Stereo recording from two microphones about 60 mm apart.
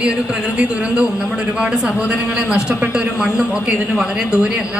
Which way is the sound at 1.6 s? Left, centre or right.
Centre.